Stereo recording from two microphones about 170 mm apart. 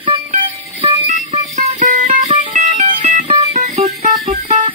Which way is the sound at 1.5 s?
45° right (ahead or behind).